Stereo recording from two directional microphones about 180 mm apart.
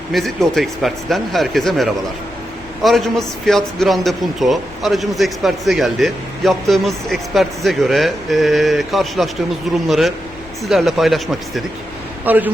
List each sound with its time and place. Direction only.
0.1 s a man's voice: centre (ahead or behind)